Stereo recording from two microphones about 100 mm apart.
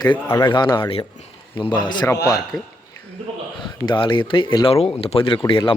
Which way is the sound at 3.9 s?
55° left (ahead or behind).